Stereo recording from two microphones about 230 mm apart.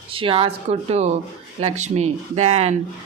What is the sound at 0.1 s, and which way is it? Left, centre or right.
Speech, right.